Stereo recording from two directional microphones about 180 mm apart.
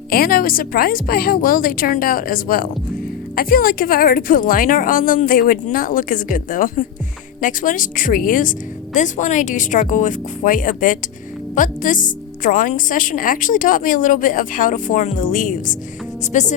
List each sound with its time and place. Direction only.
0.1 s a woman's voice: 55° left (ahead or behind)